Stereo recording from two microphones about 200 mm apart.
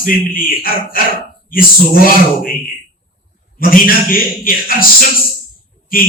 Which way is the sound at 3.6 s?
45° left (ahead or behind).